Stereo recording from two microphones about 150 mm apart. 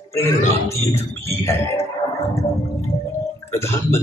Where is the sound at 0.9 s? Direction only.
20° left (ahead or behind).